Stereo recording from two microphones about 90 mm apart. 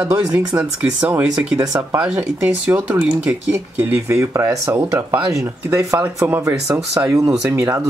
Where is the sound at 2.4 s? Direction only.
10° right (ahead or behind).